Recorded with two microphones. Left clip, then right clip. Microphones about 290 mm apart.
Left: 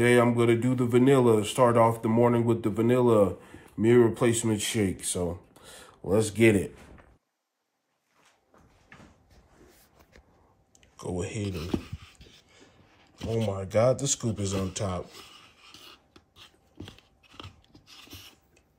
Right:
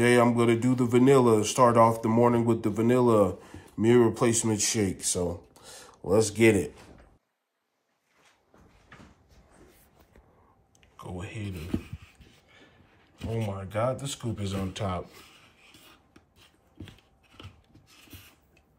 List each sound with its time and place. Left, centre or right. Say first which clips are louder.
0.0 s speech: even; centre
11.0 s speech: left 6 dB; left